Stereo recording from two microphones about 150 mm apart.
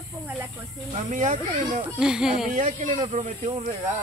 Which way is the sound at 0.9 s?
50° right (ahead or behind).